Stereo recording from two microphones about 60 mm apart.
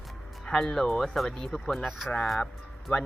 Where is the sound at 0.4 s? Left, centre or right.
Centre.